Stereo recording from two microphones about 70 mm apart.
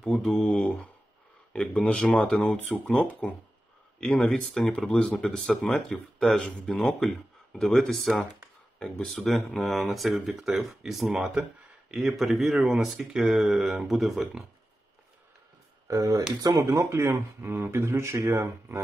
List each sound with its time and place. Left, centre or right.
0.0 s speech: centre
1.5 s speech: centre
15.9 s speech: right
16.3 s speech: right